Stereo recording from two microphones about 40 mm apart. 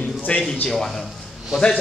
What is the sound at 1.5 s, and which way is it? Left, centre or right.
Speech, centre.